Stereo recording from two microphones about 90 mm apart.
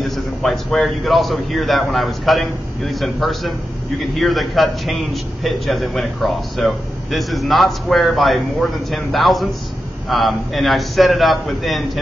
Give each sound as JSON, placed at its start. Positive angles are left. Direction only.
{"t": 0.0, "sound": "a man's voice", "side_deg": 5}